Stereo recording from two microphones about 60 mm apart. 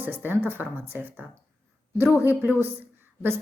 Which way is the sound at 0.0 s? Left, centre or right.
Right.